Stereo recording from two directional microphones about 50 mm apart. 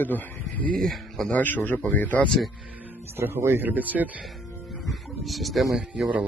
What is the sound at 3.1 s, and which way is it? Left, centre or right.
Speech, right.